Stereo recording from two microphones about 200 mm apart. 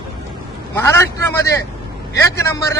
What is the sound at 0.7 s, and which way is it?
A man's voice, 15° left (ahead or behind).